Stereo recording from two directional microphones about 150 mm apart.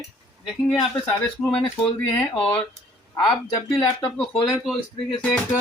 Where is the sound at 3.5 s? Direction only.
25° left (ahead or behind).